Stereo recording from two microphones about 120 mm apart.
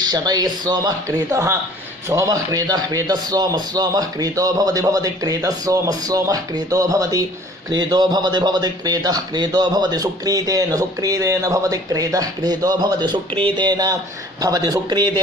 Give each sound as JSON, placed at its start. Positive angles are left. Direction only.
{"t": 0.0, "sound": "speech", "side_deg": -35}